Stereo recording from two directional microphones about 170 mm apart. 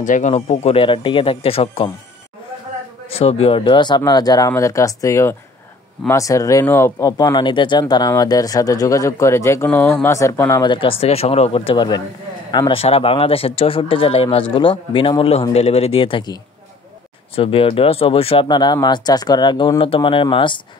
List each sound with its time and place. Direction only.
0.0 s speech: 45° left (ahead or behind)
3.1 s speech: 35° left (ahead or behind); by 10.6 s 15° left (ahead or behind)
10.6 s speech: 30° left (ahead or behind)
17.4 s speech: 30° left (ahead or behind)